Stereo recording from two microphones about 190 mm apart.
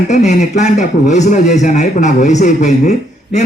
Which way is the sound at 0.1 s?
40° left (ahead or behind).